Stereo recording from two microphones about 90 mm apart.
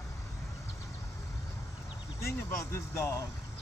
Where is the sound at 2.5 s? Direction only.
35° left (ahead or behind).